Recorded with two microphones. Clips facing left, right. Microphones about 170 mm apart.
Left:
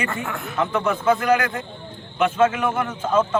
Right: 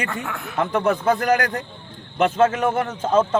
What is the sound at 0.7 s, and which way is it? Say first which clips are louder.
Speech: right 1 dB; 35° right (ahead or behind).